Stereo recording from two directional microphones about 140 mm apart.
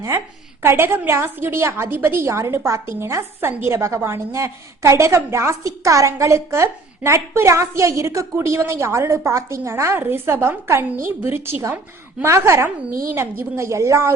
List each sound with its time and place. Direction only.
0.6 s a woman's voice: 15° right (ahead or behind)